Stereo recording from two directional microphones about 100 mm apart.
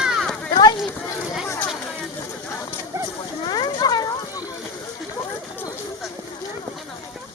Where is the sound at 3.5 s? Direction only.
45° left (ahead or behind).